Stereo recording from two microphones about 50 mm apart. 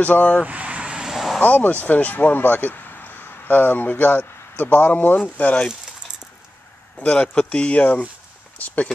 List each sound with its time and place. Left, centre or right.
0.0 s speech: left
0.5 s vehicle: right
1.1 s a sound: centre
1.4 s speech: left
7.0 s speech: left
8.5 s a sound: left